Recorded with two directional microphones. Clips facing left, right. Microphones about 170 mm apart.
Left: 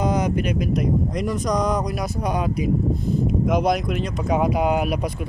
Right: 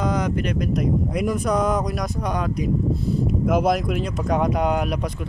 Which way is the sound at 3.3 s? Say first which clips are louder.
Even; centre (ahead or behind).